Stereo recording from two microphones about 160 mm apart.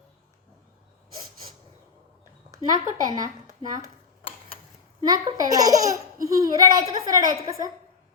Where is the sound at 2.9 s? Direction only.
25° right (ahead or behind).